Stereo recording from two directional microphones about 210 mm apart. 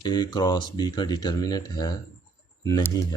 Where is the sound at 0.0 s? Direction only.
20° left (ahead or behind).